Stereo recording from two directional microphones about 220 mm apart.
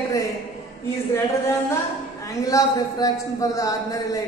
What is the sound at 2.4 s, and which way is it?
A woman's voice, 15° left (ahead or behind).